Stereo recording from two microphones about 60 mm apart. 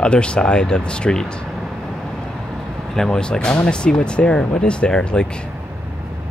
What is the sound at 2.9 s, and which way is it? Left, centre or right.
Speech, centre.